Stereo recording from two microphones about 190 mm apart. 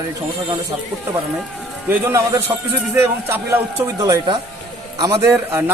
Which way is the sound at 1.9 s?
15° right (ahead or behind).